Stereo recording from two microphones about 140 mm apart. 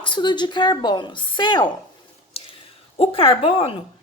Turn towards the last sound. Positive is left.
turn(degrees=40)  # may be behind; listen again after turning